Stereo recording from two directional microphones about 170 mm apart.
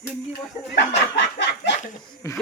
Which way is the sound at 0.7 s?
90° left.